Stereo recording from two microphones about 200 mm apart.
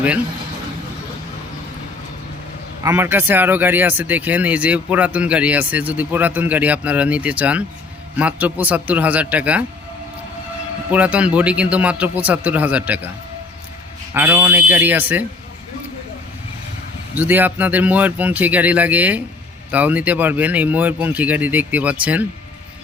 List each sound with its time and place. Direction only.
2.8 s speech: 10° right (ahead or behind)
10.9 s speech: 5° right (ahead or behind)
14.1 s speech: 10° right (ahead or behind)
17.2 s speech: 10° right (ahead or behind)